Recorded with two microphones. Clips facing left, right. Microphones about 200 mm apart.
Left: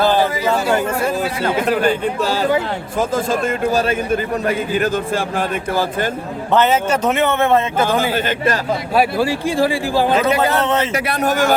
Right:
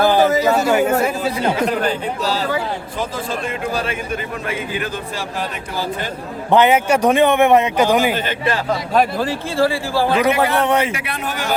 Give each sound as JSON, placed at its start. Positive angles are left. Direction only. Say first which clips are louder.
{"t": 0.2, "sound": "a sound", "louder": "right 4 dB", "side_deg": -45}
{"t": 0.7, "sound": "a man's voice", "louder": "right 2 dB", "side_deg": -5}
{"t": 1.9, "sound": "a man's voice", "louder": "left 3 dB", "side_deg": 55}
{"t": 3.7, "sound": "a man's voice", "louder": "left 7 dB", "side_deg": 40}
{"t": 6.5, "sound": "a man's voice", "louder": "right 2 dB", "side_deg": -15}
{"t": 9.0, "sound": "speech", "louder": "left 2 dB", "side_deg": 10}
{"t": 10.2, "sound": "a man's voice", "louder": "even", "side_deg": -15}
{"t": 10.9, "sound": "a man's voice", "louder": "left 8 dB", "side_deg": 40}